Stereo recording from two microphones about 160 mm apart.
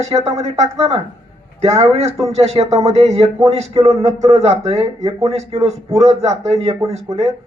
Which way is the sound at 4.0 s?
45° right (ahead or behind).